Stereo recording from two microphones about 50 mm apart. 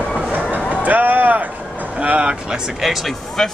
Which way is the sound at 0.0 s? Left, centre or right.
Centre.